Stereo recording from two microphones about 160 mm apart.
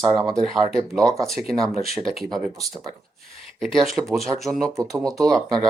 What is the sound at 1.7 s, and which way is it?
Speech, 40° left (ahead or behind).